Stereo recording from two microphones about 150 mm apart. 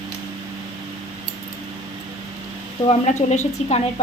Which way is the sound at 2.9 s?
50° left (ahead or behind).